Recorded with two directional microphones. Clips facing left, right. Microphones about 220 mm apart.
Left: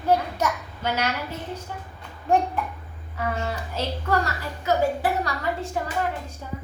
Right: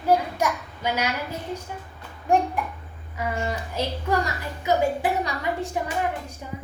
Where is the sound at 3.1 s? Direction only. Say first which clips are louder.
Even; 15° right (ahead or behind).